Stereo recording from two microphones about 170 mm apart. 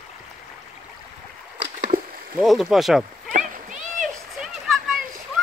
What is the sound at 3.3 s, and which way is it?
Splash, 50° right (ahead or behind).